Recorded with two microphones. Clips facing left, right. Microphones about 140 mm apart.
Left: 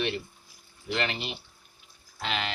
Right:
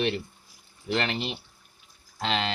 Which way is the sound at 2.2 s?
30° right (ahead or behind).